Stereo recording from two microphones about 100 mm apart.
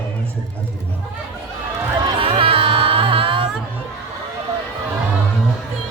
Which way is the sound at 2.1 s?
70° right (ahead or behind).